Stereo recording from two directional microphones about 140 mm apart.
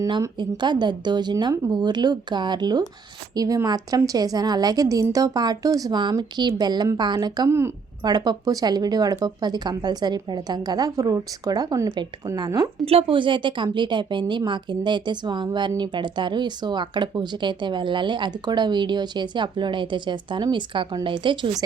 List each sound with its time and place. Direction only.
0.0 s speech: 30° right (ahead or behind)
12.8 s speech: 45° right (ahead or behind)